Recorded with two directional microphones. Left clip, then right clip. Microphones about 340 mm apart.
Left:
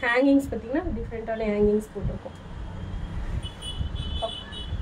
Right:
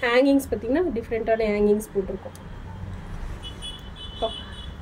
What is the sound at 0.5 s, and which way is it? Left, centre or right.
Speech, right.